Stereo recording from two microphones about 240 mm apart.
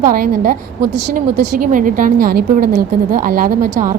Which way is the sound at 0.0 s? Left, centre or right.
Right.